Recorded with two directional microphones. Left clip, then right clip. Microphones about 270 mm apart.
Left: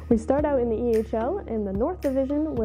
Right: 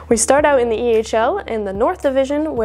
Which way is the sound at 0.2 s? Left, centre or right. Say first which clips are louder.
Right 10 dB; centre.